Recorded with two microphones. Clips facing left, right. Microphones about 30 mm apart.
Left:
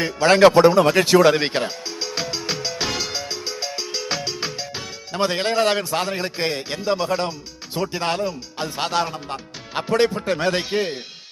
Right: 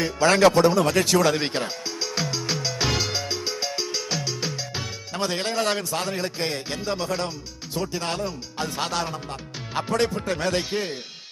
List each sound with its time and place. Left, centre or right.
0.0 s speech: left
1.6 s music: centre
2.9 s music: centre
4.1 s music: left
5.1 s speech: left